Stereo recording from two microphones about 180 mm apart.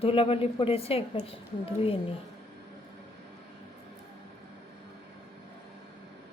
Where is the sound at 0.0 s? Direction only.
30° left (ahead or behind).